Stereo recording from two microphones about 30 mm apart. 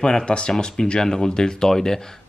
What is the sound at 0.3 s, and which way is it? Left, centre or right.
Speech, left.